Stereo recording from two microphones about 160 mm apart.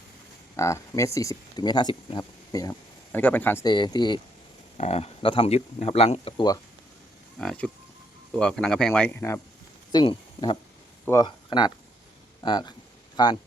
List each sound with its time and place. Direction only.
0.5 s speech: 20° left (ahead or behind)
3.1 s speech: 10° left (ahead or behind)
3.6 s speech: 25° left (ahead or behind)
4.8 s speech: 40° left (ahead or behind)
7.3 s speech: 5° left (ahead or behind)
9.9 s speech: 30° left (ahead or behind)